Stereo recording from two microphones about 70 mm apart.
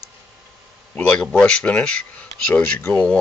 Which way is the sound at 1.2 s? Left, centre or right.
Centre.